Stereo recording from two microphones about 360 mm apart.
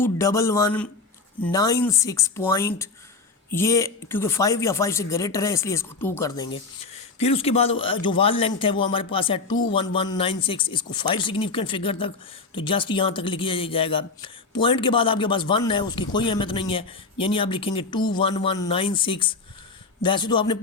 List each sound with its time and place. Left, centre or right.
0.0 s speech: centre